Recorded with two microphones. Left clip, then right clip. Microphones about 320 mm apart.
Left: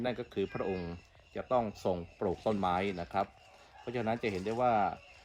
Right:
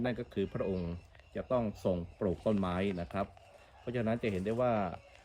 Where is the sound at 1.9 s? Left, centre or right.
Right.